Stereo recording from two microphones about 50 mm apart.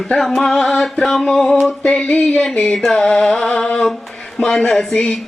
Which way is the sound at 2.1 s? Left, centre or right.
Left.